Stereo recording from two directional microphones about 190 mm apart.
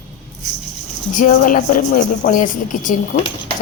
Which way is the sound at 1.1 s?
45° left (ahead or behind).